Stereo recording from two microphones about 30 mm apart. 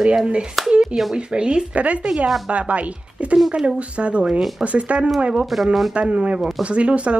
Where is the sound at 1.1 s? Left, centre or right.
Right.